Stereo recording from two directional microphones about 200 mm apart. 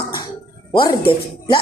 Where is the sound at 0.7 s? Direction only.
25° left (ahead or behind).